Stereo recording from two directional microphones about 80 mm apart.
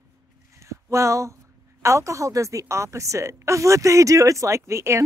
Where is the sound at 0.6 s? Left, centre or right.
Right.